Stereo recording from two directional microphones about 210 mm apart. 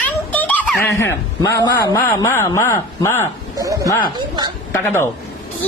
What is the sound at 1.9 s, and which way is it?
Speech, 15° left (ahead or behind).